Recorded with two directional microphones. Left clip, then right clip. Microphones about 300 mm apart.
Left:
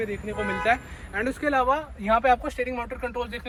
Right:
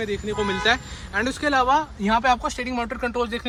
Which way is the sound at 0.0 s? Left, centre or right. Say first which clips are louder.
Right 4 dB; centre.